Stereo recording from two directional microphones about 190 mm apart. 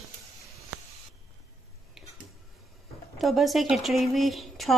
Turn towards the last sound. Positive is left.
turn(degrees=0)  # may be behind; listen again after turning